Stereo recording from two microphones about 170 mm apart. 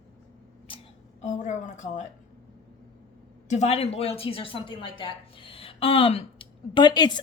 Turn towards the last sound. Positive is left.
turn(degrees=25)  # may be behind; listen again after turning